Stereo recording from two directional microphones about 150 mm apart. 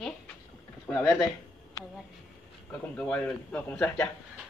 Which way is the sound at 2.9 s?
10° left (ahead or behind).